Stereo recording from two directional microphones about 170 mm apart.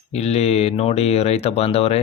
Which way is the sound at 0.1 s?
40° left (ahead or behind).